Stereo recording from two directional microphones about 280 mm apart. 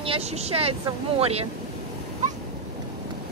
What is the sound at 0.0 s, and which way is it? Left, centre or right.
Speech, right.